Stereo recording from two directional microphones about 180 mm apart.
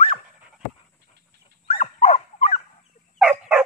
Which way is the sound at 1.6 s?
35° left (ahead or behind).